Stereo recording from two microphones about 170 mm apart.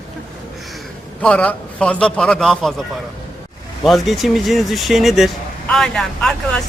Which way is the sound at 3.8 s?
Centre (ahead or behind).